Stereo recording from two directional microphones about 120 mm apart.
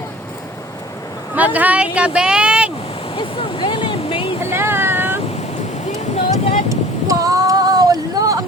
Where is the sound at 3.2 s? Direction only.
45° left (ahead or behind).